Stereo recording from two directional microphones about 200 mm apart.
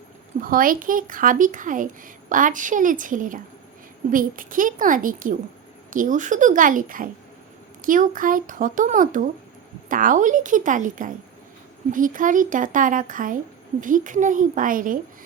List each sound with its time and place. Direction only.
0.4 s a woman's voice: 45° right (ahead or behind)